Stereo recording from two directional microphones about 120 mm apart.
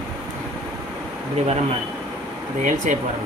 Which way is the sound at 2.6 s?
90° right.